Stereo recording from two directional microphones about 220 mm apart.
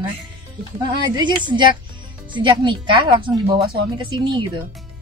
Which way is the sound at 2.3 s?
20° right (ahead or behind).